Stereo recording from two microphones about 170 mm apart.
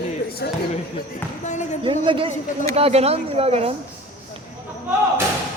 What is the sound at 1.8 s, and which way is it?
Speech, 30° right (ahead or behind).